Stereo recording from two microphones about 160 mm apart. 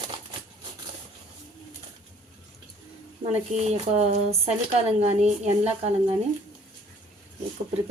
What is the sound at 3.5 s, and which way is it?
A woman's voice, 40° right (ahead or behind).